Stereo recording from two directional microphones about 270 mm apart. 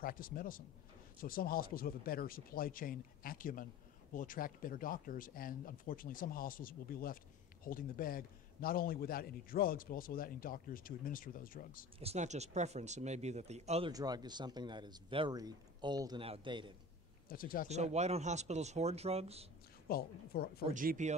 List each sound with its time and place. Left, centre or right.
0.0 s a man's voice: left
12.0 s speech: right
17.3 s a man's voice: left
17.6 s speech: right
19.9 s a man's voice: left
20.7 s speech: right